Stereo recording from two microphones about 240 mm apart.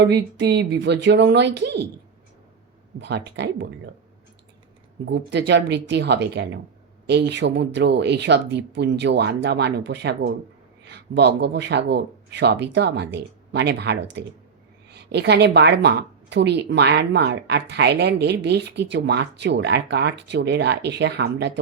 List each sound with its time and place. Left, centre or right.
0.0 s speech: right
3.0 s speech: right
5.0 s speech: right